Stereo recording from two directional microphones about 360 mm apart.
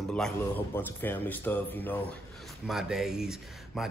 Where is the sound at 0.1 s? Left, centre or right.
Centre.